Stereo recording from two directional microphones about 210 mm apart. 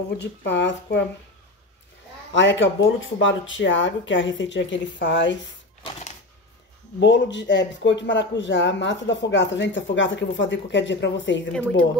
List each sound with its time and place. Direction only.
0.2 s speech: 55° left (ahead or behind)
2.3 s speech: 60° left (ahead or behind)
5.9 s typewriter: 30° left (ahead or behind)
7.0 s speech: 60° left (ahead or behind)